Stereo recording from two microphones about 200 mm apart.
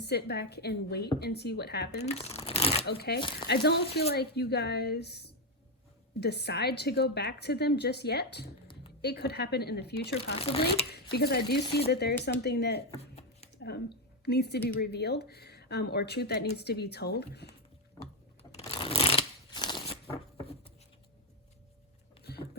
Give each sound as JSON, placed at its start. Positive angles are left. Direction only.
{"t": 0.0, "sound": "speech", "side_deg": 55}
{"t": 2.0, "sound": "shuffling cards", "side_deg": 30}
{"t": 2.8, "sound": "speech", "side_deg": 55}
{"t": 10.3, "sound": "speech", "side_deg": 30}
{"t": 10.9, "sound": "speech", "side_deg": 55}
{"t": 13.0, "sound": "a sound", "side_deg": 30}
{"t": 13.6, "sound": "speech", "side_deg": 55}
{"t": 18.6, "sound": "a sound", "side_deg": 25}
{"t": 22.2, "sound": "vehicle", "side_deg": 55}